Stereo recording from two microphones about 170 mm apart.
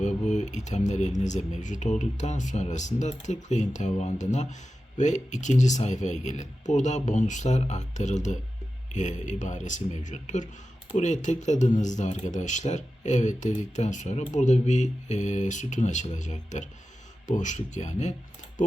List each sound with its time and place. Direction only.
0.0 s speech: 45° left (ahead or behind)